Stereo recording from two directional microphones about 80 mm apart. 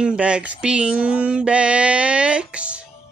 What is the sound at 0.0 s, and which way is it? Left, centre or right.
Mantra, centre.